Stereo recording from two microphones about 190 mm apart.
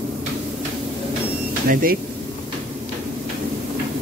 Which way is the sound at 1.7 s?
50° right (ahead or behind).